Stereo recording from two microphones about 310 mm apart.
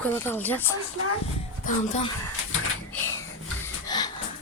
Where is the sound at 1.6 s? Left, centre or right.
Left.